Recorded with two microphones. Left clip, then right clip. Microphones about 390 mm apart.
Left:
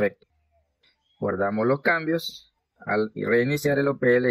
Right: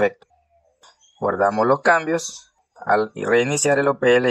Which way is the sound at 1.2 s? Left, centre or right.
Right.